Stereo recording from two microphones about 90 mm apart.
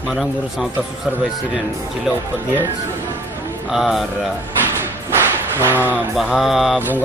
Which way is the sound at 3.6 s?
Centre (ahead or behind).